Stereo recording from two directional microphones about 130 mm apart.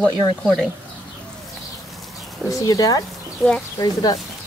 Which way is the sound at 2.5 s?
25° left (ahead or behind).